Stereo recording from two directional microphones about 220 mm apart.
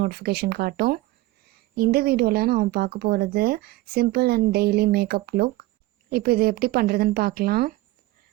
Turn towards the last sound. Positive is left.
turn(degrees=-45)  # may be behind; listen again after turning